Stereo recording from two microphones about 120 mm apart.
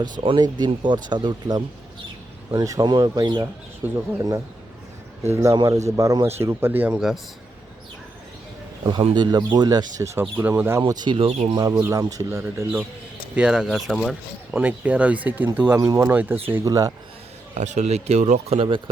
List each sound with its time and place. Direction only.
0.0 s speech: 40° right (ahead or behind); by 7.0 s 15° right (ahead or behind)
9.1 s speech: 35° right (ahead or behind)
11.2 s speech: 55° right (ahead or behind)
11.5 s speech: 35° right (ahead or behind)
13.3 s speech: 5° right (ahead or behind)
14.5 s speech: 15° right (ahead or behind)
15.8 s speech: 30° right (ahead or behind)
16.0 s speech: 15° right (ahead or behind)
17.5 s speech: 80° right; by 18.8 s 50° right (ahead or behind)